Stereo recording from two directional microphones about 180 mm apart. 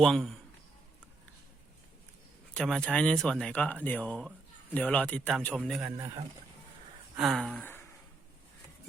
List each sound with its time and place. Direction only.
0.0 s speech: centre (ahead or behind)
2.5 s speech: 5° left (ahead or behind)
7.2 s a sound: centre (ahead or behind)